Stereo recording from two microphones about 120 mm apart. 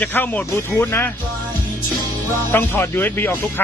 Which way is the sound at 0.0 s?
15° left (ahead or behind).